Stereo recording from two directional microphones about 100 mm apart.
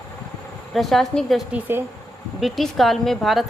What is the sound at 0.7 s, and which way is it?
Speech, centre (ahead or behind).